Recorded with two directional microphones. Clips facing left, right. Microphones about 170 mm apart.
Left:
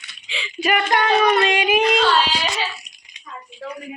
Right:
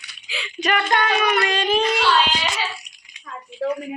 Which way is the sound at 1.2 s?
25° left (ahead or behind).